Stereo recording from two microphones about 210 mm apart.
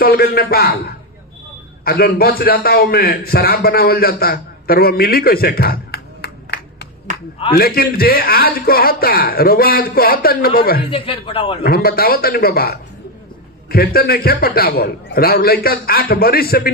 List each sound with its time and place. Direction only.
0.0 s a man's voice: 45° left (ahead or behind)
10.9 s speech: 25° left (ahead or behind)
11.6 s a man's voice: 45° left (ahead or behind)